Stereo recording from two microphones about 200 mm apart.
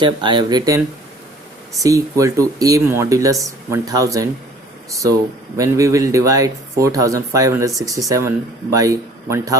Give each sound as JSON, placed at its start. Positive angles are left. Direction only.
{"t": 0.0, "sound": "speech", "side_deg": -25}
{"t": 1.8, "sound": "speech", "side_deg": -15}
{"t": 5.5, "sound": "speech", "side_deg": -15}